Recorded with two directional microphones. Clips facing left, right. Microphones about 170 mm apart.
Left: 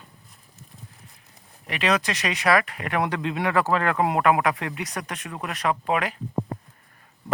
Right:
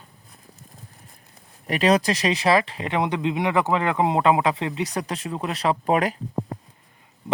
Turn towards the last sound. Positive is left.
turn(degrees=-35)  # may be behind; listen again after turning